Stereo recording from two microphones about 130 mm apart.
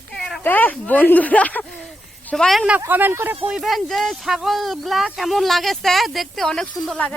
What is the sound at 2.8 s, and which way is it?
Speech, 15° right (ahead or behind).